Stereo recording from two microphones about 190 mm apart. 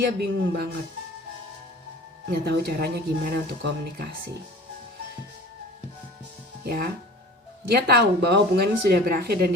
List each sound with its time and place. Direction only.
0.0 s speech: 60° right (ahead or behind)
2.4 s speech: 55° right (ahead or behind)
6.7 s speech: 55° right (ahead or behind)